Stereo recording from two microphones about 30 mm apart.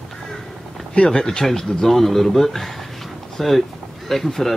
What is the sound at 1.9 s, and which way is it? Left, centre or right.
Speech, centre.